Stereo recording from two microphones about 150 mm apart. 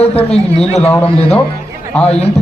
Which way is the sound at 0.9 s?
15° left (ahead or behind).